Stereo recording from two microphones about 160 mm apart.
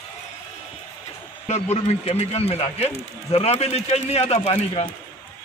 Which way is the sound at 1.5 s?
40° left (ahead or behind).